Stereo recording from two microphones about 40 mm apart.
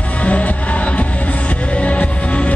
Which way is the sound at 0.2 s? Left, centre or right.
Left.